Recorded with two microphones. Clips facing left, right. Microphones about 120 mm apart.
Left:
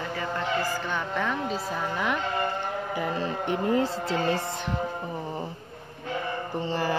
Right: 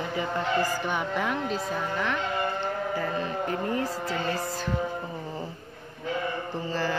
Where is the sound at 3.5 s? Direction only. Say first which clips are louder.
Left 8 dB; 25° left (ahead or behind).